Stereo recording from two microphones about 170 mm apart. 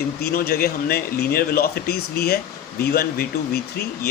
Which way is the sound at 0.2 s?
65° left (ahead or behind).